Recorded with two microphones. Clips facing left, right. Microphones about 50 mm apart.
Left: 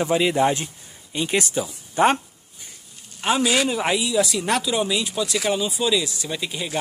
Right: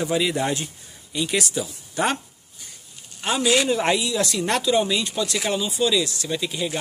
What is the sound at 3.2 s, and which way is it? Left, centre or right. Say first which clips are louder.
Speech: even; centre.